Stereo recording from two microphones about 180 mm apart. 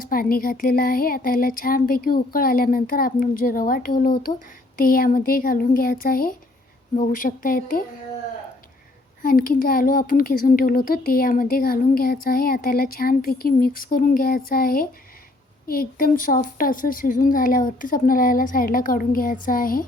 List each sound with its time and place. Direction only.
0.0 s speech: 55° left (ahead or behind)
9.2 s speech: 50° left (ahead or behind)